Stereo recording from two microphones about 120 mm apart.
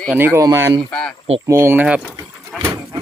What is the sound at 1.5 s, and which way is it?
Speech, 20° right (ahead or behind).